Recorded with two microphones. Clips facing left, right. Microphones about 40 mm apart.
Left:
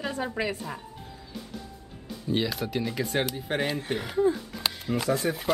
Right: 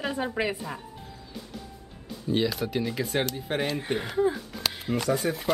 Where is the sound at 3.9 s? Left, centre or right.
Centre.